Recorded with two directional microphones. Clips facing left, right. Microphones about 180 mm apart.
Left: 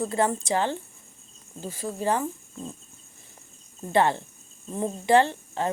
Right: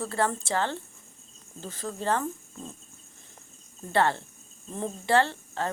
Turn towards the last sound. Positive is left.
turn(degrees=15)  # may be behind; listen again after turning